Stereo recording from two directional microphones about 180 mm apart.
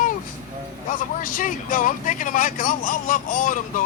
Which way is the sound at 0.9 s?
50° left (ahead or behind).